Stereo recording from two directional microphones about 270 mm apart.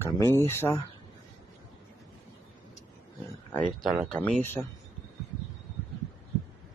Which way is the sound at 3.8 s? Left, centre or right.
Centre.